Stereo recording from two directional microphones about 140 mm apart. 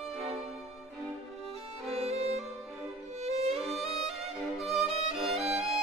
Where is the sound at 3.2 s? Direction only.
50° right (ahead or behind).